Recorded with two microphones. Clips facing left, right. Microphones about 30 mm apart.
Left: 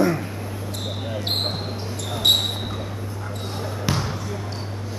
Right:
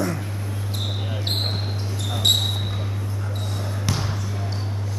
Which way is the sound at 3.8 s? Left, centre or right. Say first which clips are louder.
Left 3 dB; centre.